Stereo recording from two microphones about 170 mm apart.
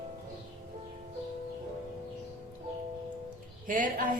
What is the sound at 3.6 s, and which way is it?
Speech, 50° right (ahead or behind).